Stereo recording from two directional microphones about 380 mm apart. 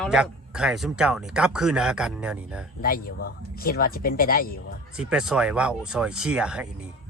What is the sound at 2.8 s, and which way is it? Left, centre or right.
Speech, left.